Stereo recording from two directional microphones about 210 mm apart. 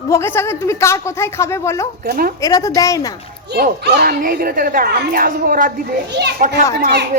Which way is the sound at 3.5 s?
50° right (ahead or behind).